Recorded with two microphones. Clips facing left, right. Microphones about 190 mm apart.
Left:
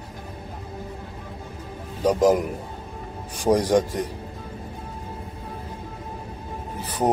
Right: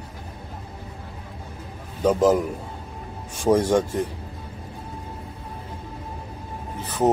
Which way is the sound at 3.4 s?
15° left (ahead or behind).